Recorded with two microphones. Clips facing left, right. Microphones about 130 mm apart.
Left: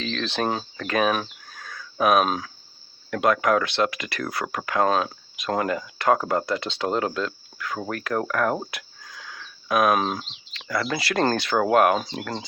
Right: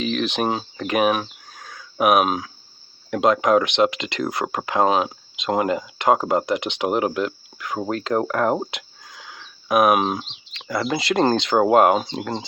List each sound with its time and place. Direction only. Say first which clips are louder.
0.0 s speech: right 4 dB; 15° right (ahead or behind)
1.5 s a sound: even; 15° right (ahead or behind)
3.1 s speech: right 3 dB; 20° right (ahead or behind)